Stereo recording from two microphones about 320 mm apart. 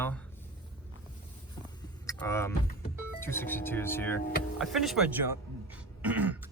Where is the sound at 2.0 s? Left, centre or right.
Centre.